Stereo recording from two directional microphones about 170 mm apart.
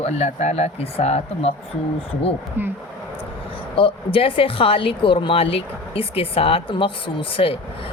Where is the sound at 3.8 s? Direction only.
30° left (ahead or behind).